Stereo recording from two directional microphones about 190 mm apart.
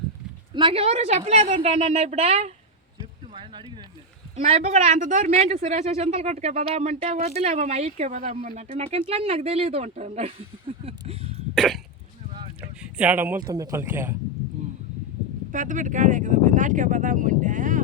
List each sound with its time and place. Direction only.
0.5 s speech: 30° right (ahead or behind)
3.3 s a sound: 25° right (ahead or behind)
4.4 s speech: 35° right (ahead or behind)
10.8 s a sound: 30° right (ahead or behind)
11.5 s cough: centre (ahead or behind)
12.8 s speech: 10° right (ahead or behind)
15.5 s speech: 40° right (ahead or behind)